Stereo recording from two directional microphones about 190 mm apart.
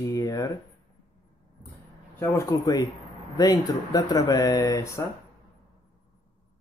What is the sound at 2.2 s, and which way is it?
Speech, 15° left (ahead or behind).